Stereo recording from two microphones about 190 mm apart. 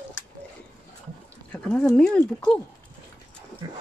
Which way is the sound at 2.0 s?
5° left (ahead or behind).